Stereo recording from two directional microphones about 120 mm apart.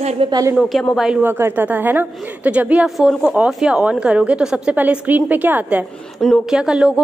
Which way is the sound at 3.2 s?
15° right (ahead or behind).